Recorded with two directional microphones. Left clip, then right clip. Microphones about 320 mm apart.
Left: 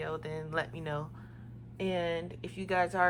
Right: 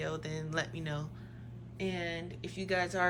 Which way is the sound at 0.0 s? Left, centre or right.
Centre.